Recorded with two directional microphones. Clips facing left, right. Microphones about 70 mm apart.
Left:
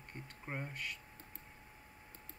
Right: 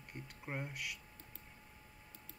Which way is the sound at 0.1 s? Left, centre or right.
Centre.